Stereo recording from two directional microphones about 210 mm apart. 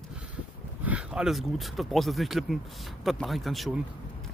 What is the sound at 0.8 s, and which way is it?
Speech, 5° right (ahead or behind).